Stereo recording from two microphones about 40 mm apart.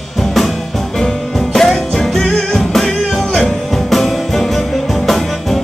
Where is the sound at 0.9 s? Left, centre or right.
Centre.